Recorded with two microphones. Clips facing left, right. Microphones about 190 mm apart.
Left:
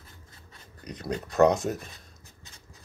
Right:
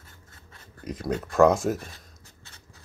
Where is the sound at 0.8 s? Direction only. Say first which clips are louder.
Right 4 dB; 5° right (ahead or behind).